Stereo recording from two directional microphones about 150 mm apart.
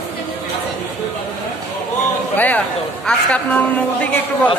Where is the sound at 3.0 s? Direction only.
5° left (ahead or behind).